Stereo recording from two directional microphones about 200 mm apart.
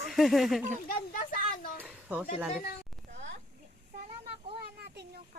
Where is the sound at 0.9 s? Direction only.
45° left (ahead or behind).